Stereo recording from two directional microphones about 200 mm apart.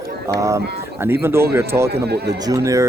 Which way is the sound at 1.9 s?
55° right (ahead or behind).